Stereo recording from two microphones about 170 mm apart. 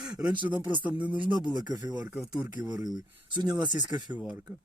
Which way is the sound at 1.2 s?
25° right (ahead or behind).